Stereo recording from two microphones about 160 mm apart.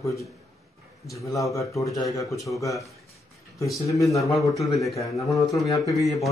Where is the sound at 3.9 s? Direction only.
20° left (ahead or behind).